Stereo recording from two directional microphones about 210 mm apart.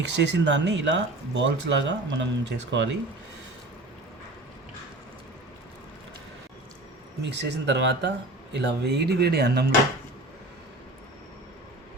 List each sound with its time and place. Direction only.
0.0 s speech: 55° right (ahead or behind)
7.2 s speech: 55° right (ahead or behind)